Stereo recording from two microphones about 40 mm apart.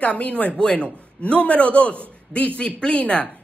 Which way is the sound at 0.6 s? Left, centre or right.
Left.